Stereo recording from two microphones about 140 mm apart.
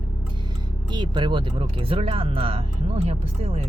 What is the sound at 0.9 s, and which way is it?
Speech, 35° right (ahead or behind).